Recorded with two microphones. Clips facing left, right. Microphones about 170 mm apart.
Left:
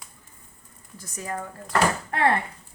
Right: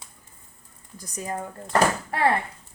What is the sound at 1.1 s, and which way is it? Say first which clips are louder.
Speech: right 1 dB; 20° right (ahead or behind).